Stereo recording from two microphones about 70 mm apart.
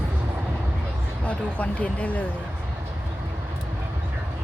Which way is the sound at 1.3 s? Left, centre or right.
Centre.